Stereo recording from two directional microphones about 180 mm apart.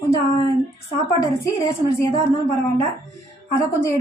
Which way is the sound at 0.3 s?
15° left (ahead or behind).